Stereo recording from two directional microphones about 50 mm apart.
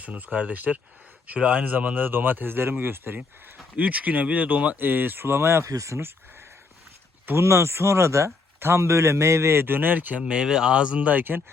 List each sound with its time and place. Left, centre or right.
0.0 s speech: right
2.0 s speech: right
3.8 s speech: right
4.8 s speech: right
7.3 s a man's voice: right
10.2 s speech: centre
11.1 s speech: right